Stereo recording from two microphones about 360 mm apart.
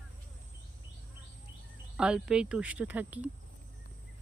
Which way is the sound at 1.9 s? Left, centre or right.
Centre.